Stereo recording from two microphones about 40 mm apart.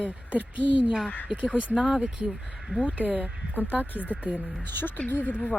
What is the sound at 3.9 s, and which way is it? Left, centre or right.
Speech, left.